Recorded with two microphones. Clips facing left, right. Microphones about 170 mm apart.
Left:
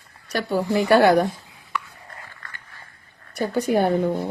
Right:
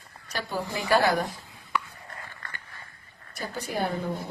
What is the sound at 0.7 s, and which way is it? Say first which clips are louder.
Speech: left 8 dB; 65° left (ahead or behind).